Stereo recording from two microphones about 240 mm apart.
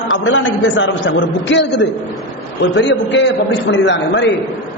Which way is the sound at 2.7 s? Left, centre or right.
Left.